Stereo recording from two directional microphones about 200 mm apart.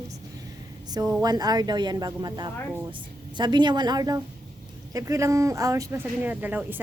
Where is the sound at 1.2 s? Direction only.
20° right (ahead or behind).